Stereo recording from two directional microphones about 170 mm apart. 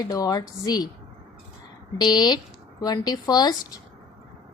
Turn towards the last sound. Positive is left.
turn(degrees=25)  # may be behind; listen again after turning